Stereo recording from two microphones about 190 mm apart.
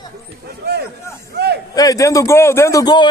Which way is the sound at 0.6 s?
60° right (ahead or behind).